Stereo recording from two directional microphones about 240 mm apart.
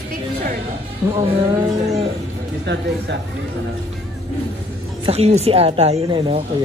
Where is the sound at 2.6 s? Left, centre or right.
Right.